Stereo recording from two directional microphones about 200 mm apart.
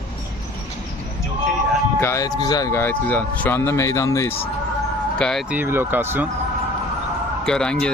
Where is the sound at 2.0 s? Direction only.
15° left (ahead or behind).